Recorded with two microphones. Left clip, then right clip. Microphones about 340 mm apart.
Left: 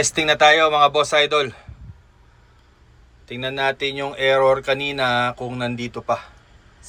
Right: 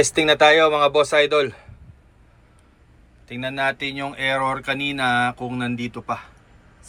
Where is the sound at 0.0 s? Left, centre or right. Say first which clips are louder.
Even; centre.